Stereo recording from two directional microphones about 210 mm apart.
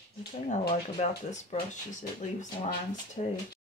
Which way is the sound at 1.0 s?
35° left (ahead or behind).